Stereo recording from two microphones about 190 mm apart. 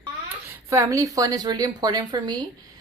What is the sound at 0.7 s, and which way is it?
A woman's voice, 15° right (ahead or behind).